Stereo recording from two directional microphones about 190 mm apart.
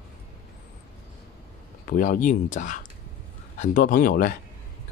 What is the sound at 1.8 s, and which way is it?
Speech, 45° left (ahead or behind).